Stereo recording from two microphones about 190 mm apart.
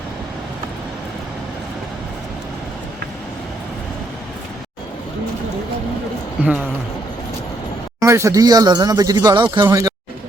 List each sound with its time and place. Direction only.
8.0 s speech: 15° right (ahead or behind)